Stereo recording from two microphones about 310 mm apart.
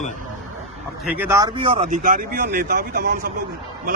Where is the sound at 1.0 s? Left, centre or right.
Centre; by 3.3 s right.